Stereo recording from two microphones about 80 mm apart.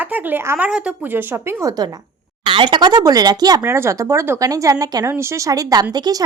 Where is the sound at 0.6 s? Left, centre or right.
Centre.